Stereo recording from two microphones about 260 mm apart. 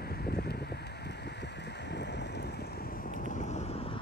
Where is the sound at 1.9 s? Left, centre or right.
Left.